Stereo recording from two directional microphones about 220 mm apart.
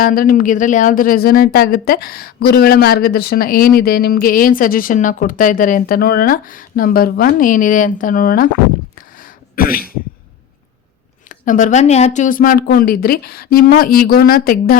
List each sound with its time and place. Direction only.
0.0 s a woman's voice: 40° left (ahead or behind)
9.0 s throat clearing: 40° left (ahead or behind)
11.3 s a woman's voice: 35° left (ahead or behind)